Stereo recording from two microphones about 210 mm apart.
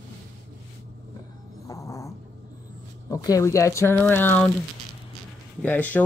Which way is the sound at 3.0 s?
15° left (ahead or behind).